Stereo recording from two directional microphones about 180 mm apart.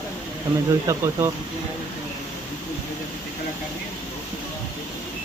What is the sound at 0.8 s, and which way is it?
Speech, 15° right (ahead or behind).